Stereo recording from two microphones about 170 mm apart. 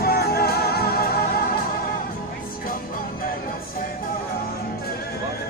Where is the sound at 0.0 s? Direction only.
65° left (ahead or behind).